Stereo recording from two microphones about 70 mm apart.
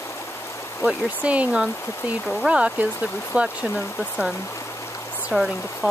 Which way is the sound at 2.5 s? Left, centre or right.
Centre.